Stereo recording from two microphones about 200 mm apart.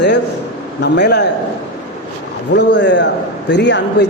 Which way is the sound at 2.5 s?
60° left (ahead or behind).